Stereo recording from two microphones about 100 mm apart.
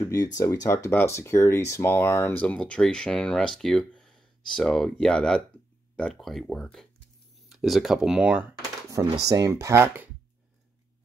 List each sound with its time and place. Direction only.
0.0 s speech: 35° left (ahead or behind)
2.4 s speech: 10° left (ahead or behind); by 9.1 s 20° right (ahead or behind)
9.3 s speech: 35° right (ahead or behind)